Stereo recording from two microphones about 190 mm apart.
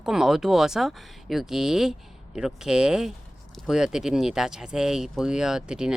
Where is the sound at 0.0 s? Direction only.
5° right (ahead or behind).